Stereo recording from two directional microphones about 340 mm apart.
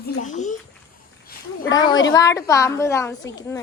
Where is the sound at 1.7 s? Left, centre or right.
Centre.